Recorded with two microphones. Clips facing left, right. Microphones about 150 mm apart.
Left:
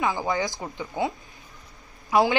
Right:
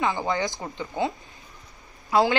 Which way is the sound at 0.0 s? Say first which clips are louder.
Even; centre (ahead or behind).